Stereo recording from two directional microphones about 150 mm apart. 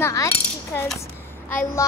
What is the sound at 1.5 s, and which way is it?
Speech, 20° left (ahead or behind).